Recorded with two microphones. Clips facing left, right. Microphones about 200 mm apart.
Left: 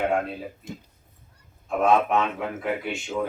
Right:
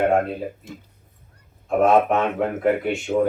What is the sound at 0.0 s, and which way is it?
Speech, 45° right (ahead or behind).